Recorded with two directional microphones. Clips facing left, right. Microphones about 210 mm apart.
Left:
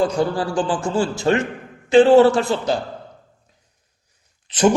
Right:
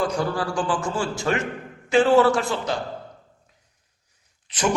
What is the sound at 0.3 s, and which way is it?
A man's voice, 30° left (ahead or behind).